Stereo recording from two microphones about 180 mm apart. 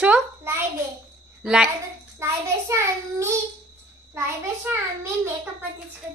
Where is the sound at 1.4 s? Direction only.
5° right (ahead or behind).